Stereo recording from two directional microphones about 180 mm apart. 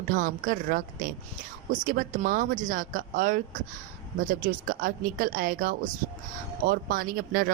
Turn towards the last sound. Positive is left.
turn(degrees=-50)  # may be behind; listen again after turning